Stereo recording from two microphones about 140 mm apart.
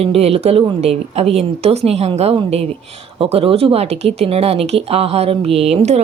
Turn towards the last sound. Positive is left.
turn(degrees=-50)  # may be behind; listen again after turning